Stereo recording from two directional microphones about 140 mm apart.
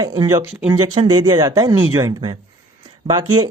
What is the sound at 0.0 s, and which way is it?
Speech, 30° right (ahead or behind).